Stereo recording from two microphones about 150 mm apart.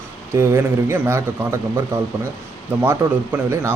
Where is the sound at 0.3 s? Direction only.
15° right (ahead or behind).